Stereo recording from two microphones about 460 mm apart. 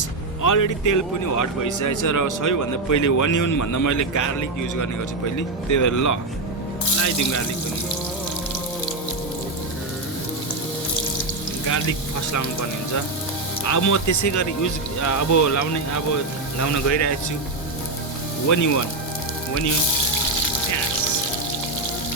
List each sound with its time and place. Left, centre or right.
0.4 s a man's voice: left
13.7 s a man's voice: left
18.4 s a man's voice: left